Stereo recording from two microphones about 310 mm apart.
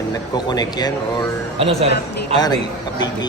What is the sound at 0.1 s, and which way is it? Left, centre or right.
Speech, centre.